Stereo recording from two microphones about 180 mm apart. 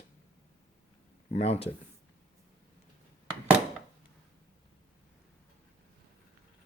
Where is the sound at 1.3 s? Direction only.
35° left (ahead or behind).